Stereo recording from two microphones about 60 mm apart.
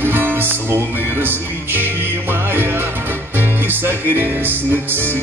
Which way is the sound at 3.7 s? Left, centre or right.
Right.